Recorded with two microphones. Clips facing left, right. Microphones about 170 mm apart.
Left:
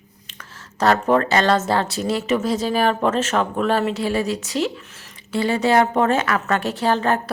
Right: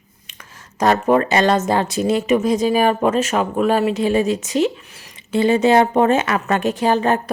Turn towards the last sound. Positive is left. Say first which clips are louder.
# right 3 dB
turn(degrees=-15)  # may be behind; listen again after turning